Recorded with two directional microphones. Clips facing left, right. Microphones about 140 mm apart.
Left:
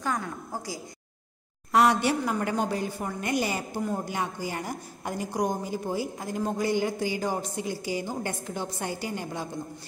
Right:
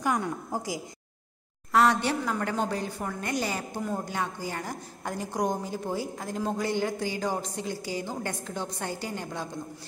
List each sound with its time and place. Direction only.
0.0 s a woman's voice: 15° right (ahead or behind)
1.7 s a woman's voice: 15° left (ahead or behind)